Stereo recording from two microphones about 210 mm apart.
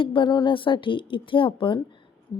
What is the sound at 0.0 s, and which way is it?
A woman's voice, 25° left (ahead or behind).